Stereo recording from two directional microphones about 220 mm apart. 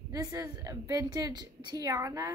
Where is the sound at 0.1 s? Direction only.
15° right (ahead or behind).